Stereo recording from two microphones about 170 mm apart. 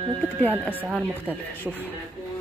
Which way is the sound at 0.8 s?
5° right (ahead or behind).